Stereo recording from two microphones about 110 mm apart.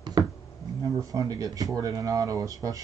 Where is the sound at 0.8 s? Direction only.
35° right (ahead or behind).